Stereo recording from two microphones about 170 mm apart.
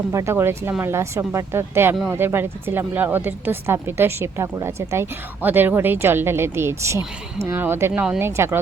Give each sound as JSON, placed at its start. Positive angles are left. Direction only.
{"t": 0.1, "sound": "speech", "side_deg": -15}